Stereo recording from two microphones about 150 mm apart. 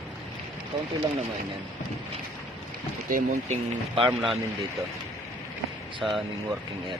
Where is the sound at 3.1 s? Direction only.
60° right (ahead or behind).